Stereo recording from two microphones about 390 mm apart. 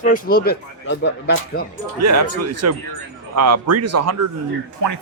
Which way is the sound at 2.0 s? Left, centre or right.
Right.